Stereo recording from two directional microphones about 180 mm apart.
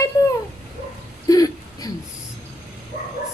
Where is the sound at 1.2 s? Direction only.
20° left (ahead or behind).